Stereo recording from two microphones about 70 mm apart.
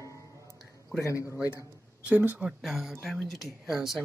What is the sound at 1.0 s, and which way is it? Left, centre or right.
Speech, left.